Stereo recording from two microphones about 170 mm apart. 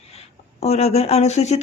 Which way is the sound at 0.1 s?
40° left (ahead or behind).